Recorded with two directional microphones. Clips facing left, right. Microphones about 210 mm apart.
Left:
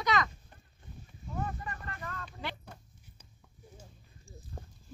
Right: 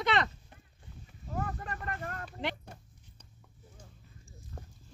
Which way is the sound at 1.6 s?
65° right (ahead or behind).